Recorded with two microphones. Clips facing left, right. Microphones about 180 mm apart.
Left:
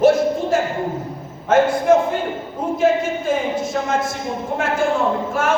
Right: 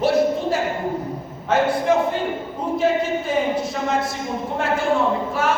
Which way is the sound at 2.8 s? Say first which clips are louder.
Left 3 dB; 45° left (ahead or behind).